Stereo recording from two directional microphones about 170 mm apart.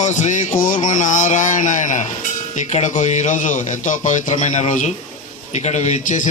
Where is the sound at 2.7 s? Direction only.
45° left (ahead or behind).